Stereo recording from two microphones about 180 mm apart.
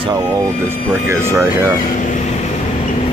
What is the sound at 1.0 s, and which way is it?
Speech, 15° right (ahead or behind).